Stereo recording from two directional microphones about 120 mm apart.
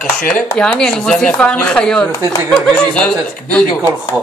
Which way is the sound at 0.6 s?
5° left (ahead or behind).